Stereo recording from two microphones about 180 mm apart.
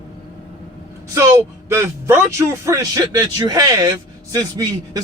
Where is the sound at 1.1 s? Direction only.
15° right (ahead or behind).